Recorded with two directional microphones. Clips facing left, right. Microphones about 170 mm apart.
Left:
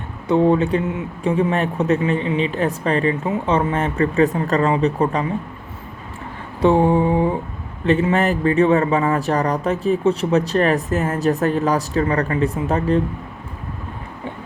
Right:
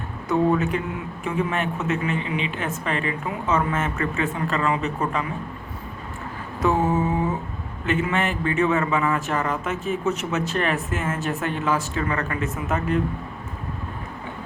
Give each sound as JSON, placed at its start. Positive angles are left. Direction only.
{"t": 0.3, "sound": "a man's voice", "side_deg": 25}
{"t": 6.6, "sound": "a man's voice", "side_deg": 30}